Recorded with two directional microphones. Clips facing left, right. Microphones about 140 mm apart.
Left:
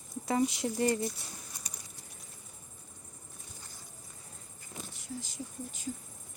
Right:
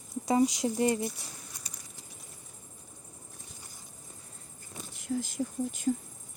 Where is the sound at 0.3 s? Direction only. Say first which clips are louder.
Right 4 dB; 15° right (ahead or behind).